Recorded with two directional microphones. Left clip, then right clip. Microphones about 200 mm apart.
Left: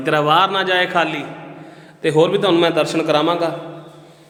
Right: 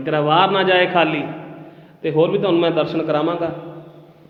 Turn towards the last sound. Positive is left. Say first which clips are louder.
# left 3 dB
turn(degrees=15)  # may be behind; listen again after turning